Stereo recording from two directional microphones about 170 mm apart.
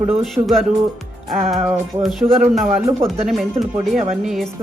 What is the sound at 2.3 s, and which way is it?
Speech, 35° right (ahead or behind).